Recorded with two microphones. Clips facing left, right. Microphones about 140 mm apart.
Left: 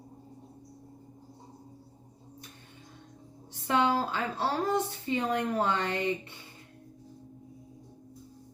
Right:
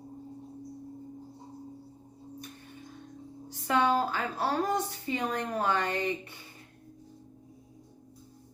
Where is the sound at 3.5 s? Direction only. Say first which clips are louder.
Even; 25° left (ahead or behind).